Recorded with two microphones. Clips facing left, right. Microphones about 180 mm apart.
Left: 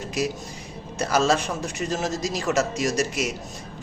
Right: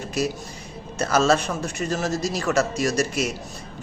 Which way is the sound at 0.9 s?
15° left (ahead or behind).